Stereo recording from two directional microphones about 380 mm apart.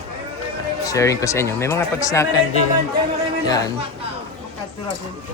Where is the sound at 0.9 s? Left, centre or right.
Centre.